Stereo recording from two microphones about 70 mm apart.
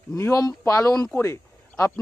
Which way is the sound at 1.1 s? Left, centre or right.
Left.